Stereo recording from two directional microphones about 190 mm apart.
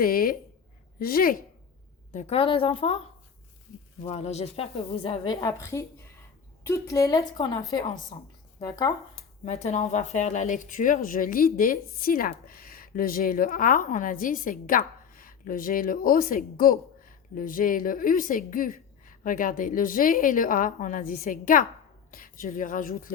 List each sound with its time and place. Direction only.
0.0 s speech: 50° left (ahead or behind)
2.1 s a woman's voice: 35° left (ahead or behind)
4.0 s a woman's voice: 35° left (ahead or behind); by 8.9 s 20° left (ahead or behind)
9.4 s a woman's voice: 35° left (ahead or behind)